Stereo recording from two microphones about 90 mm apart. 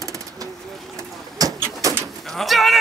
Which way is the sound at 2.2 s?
Centre (ahead or behind).